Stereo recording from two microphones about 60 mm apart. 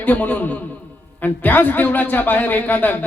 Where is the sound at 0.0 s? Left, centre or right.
Left.